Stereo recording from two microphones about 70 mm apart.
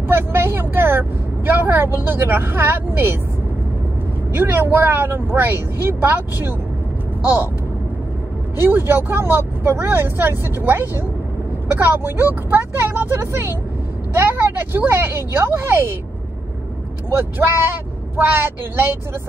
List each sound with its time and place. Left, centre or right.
0.1 s vehicle: right
4.3 s speech: right
8.5 s speech: right
17.1 s speech: right